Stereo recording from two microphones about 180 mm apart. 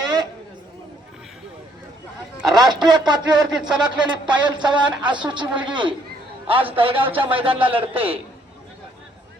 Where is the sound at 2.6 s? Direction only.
25° right (ahead or behind).